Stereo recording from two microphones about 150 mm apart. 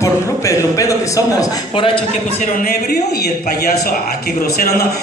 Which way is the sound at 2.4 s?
70° left (ahead or behind).